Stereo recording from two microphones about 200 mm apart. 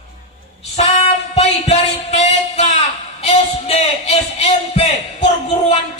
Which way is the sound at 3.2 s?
30° left (ahead or behind).